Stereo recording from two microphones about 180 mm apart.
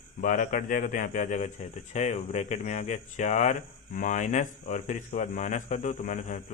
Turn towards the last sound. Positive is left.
turn(degrees=45)  # may be behind; listen again after turning